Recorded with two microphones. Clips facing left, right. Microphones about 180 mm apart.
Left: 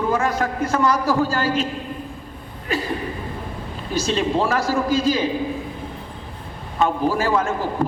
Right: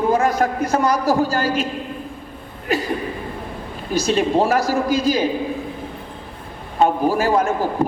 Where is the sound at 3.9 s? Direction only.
40° right (ahead or behind).